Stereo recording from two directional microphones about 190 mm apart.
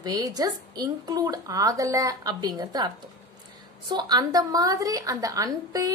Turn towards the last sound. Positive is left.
turn(degrees=-20)  # may be behind; listen again after turning